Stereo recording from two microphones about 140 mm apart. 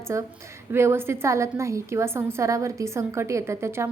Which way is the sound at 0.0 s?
20° right (ahead or behind).